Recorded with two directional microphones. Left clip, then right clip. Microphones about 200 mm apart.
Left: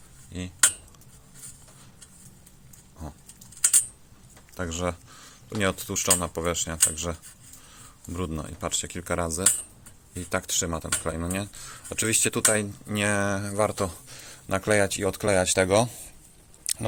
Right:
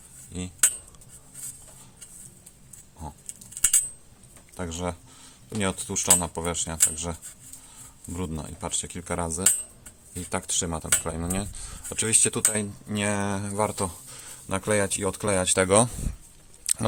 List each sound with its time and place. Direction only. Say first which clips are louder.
0.3 s cutlery: even; 10° right (ahead or behind)
4.5 s a sound: left 2 dB; centre (ahead or behind)
5.5 s speech: left 2 dB; 5° right (ahead or behind)
15.9 s speech: right 5 dB; 30° right (ahead or behind)
16.7 s chewing: right 2 dB; 20° right (ahead or behind)